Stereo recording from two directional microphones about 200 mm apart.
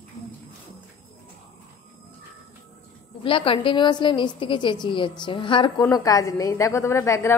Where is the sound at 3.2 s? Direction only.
25° left (ahead or behind).